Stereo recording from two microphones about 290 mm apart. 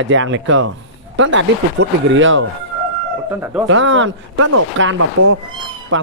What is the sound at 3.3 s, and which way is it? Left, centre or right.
Speech, centre.